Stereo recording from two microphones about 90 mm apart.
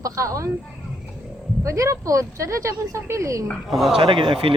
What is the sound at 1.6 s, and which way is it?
Speech, 35° right (ahead or behind).